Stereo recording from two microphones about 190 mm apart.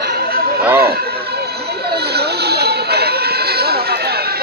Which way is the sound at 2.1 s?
60° right (ahead or behind).